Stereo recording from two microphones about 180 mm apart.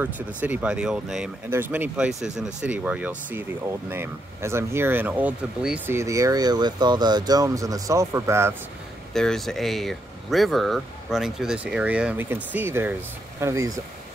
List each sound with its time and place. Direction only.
0.0 s speech: 10° right (ahead or behind)
5.9 s speech: 15° right (ahead or behind)
9.1 s speech: 5° left (ahead or behind); by 13.7 s 15° right (ahead or behind)